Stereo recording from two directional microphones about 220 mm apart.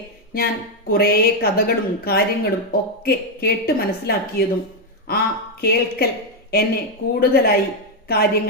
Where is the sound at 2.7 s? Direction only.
45° left (ahead or behind).